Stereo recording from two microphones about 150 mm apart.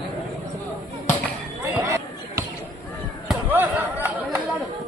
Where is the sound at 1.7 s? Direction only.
15° right (ahead or behind).